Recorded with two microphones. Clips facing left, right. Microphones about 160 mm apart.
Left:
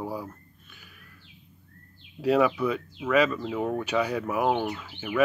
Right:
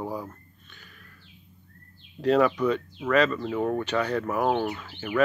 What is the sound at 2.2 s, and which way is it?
Speech, 5° left (ahead or behind).